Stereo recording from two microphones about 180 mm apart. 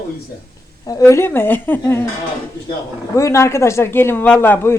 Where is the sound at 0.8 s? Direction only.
20° left (ahead or behind).